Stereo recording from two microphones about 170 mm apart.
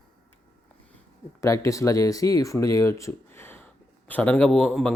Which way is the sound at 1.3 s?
20° left (ahead or behind).